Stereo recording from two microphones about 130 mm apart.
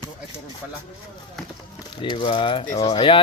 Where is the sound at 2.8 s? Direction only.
40° left (ahead or behind).